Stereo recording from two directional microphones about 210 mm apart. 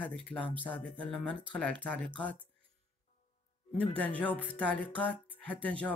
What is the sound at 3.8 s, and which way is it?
Speech, 5° left (ahead or behind).